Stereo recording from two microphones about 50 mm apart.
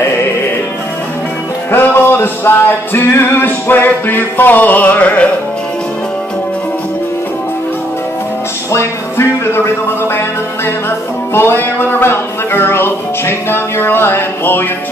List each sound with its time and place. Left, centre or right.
1.7 s music: left
11.3 s music: left